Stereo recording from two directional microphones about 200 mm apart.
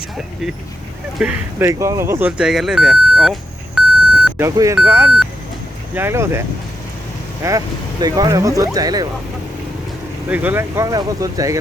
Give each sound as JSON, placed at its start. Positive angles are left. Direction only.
{"t": 1.2, "sound": "speech", "side_deg": -15}
{"t": 3.8, "sound": "beep", "side_deg": -5}
{"t": 4.3, "sound": "speech", "side_deg": -15}
{"t": 7.4, "sound": "speech", "side_deg": -15}
{"t": 10.2, "sound": "speech", "side_deg": -10}